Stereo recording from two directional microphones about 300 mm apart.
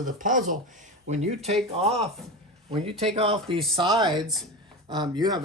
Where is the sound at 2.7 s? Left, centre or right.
Centre.